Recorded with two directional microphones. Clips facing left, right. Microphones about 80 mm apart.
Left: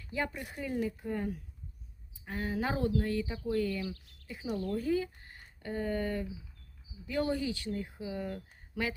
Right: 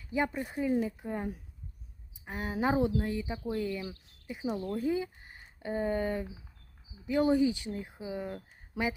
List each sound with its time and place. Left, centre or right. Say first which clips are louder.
0.0 s speech: right 5 dB; centre